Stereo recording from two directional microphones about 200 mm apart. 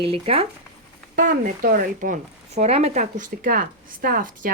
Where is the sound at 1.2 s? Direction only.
40° right (ahead or behind).